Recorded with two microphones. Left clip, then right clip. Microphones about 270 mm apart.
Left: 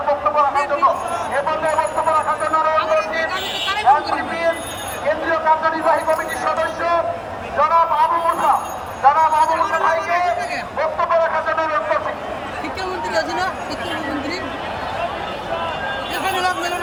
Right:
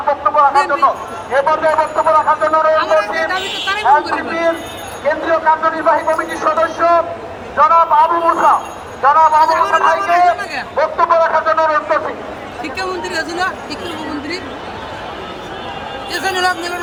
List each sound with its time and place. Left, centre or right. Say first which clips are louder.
0.3 s speech: right 5 dB; centre
16.2 s speech: right 4 dB; centre